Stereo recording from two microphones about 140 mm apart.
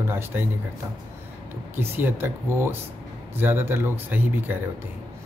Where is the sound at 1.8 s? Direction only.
15° right (ahead or behind).